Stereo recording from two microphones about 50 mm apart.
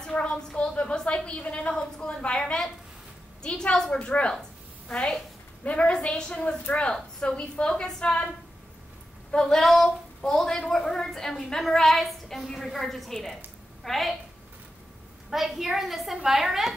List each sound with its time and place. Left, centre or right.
0.1 s a sound: left
1.8 s a woman's voice: centre
4.3 s a sound: centre
5.6 s a woman's voice: left
9.3 s a woman's voice: centre
9.6 s a woman's voice: centre
15.2 s a woman's voice: centre